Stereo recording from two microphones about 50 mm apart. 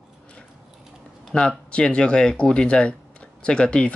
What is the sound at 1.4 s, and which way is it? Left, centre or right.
Speech, centre.